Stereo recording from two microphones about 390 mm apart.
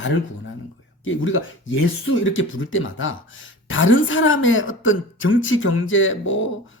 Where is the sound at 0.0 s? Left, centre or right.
Left.